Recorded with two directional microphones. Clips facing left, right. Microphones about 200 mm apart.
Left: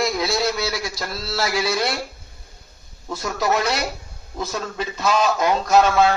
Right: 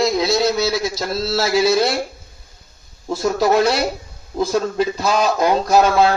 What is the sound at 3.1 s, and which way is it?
Speech, 30° right (ahead or behind).